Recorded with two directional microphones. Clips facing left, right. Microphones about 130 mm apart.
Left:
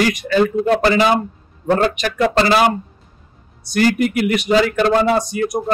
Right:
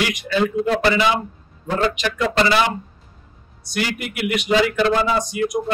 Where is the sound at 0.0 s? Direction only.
45° left (ahead or behind).